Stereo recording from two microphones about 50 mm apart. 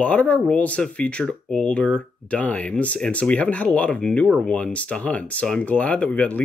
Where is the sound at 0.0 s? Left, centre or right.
Left.